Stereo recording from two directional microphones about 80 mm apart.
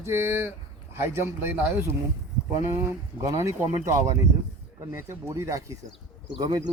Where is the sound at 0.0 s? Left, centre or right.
Right.